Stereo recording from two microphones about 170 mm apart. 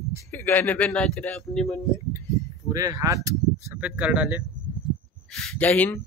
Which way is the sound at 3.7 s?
5° right (ahead or behind).